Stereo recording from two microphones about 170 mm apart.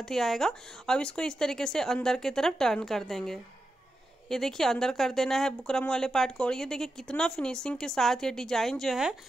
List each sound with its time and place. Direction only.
0.0 s speech: centre (ahead or behind)